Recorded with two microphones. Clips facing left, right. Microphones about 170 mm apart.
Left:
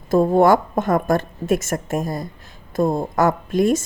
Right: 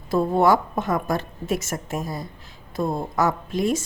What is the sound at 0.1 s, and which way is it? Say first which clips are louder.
A woman's voice: left 4 dB; 45° left (ahead or behind).